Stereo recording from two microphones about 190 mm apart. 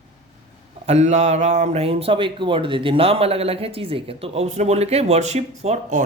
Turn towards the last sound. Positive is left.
turn(degrees=-35)  # may be behind; listen again after turning